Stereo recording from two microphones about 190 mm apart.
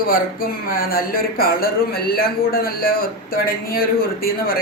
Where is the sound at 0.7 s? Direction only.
50° left (ahead or behind).